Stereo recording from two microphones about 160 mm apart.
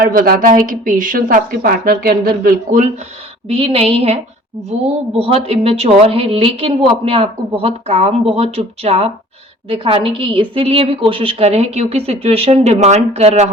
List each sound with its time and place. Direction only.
0.0 s a woman's voice: 65° right (ahead or behind)
3.5 s a woman's voice: 35° right (ahead or behind)